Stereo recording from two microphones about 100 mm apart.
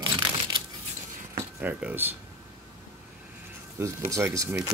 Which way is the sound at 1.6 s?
15° right (ahead or behind).